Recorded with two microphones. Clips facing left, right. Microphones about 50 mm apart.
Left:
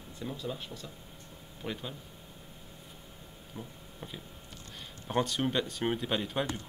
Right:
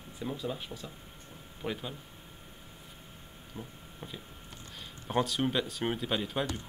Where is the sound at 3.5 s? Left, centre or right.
Centre.